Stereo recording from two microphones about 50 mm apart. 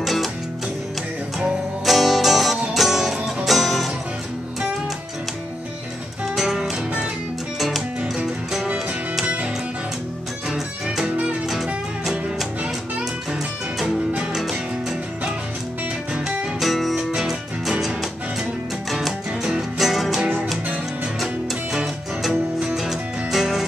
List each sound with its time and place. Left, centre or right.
0.0 s music: centre
1.9 s music: centre
6.2 s music: centre
9.2 s music: right
11.4 s music: centre
16.3 s music: centre
22.8 s music: centre